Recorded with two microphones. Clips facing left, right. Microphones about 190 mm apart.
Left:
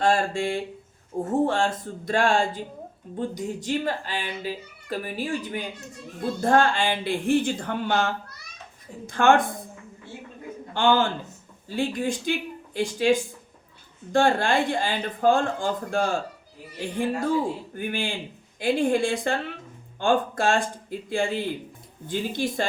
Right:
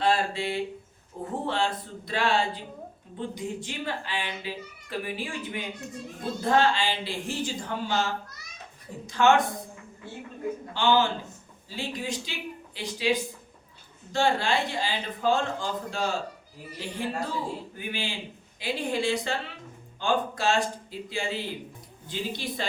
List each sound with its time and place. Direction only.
0.0 s a child's voice: 45° left (ahead or behind)
10.8 s speech: 50° left (ahead or behind)